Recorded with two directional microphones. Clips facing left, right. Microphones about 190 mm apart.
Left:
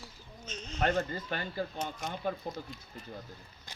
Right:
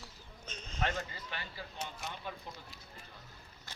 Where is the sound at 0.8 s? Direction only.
50° left (ahead or behind).